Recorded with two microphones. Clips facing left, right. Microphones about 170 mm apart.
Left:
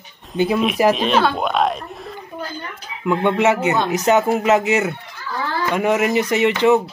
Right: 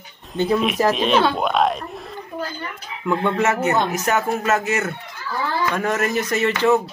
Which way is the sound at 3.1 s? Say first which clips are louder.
Left 3 dB; 20° left (ahead or behind).